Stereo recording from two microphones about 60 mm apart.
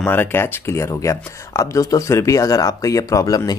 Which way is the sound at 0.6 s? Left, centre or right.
Left.